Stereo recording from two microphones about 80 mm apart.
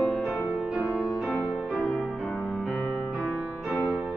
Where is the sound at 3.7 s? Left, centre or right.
Centre.